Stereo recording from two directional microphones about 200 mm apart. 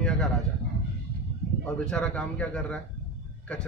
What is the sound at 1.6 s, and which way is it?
A man's voice, 5° left (ahead or behind).